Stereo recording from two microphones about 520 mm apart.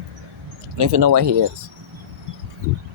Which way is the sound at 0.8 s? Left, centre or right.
Right.